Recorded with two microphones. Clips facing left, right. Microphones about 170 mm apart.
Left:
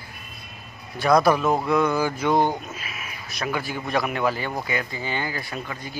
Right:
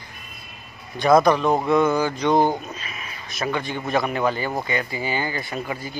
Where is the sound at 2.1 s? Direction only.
5° left (ahead or behind).